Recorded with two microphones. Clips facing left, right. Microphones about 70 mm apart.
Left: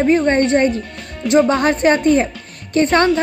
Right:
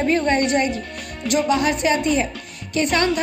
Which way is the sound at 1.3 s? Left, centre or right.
Left.